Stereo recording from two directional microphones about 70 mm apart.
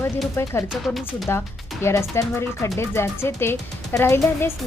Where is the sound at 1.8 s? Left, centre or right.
Left.